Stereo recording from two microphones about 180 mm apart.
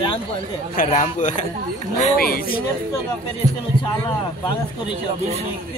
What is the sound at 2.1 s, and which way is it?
Speech, 55° left (ahead or behind).